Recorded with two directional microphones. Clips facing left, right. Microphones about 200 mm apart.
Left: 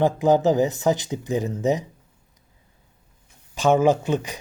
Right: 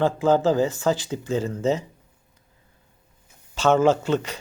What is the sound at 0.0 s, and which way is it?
Speech, 15° left (ahead or behind).